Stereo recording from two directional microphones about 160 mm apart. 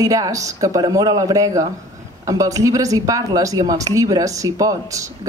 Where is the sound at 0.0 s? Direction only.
20° right (ahead or behind).